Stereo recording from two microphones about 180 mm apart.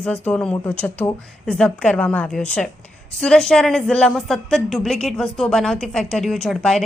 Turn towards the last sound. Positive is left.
turn(degrees=5)  # may be behind; listen again after turning